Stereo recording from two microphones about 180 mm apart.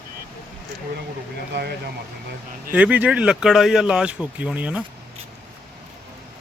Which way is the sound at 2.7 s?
10° right (ahead or behind).